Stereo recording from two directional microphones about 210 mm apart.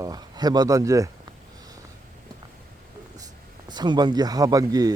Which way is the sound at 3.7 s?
20° right (ahead or behind).